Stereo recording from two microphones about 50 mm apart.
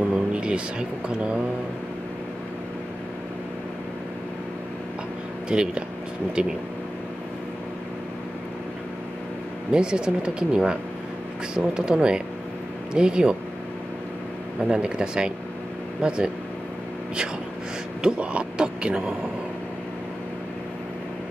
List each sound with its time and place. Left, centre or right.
0.1 s speech: right
5.5 s speech: centre
9.7 s speech: centre
14.7 s speech: centre
18.0 s speech: right